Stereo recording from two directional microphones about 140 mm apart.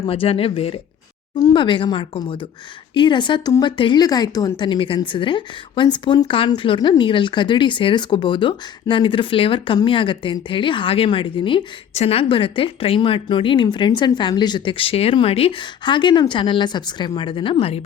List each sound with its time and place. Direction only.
0.1 s speech: 45° left (ahead or behind)
1.4 s speech: 30° left (ahead or behind)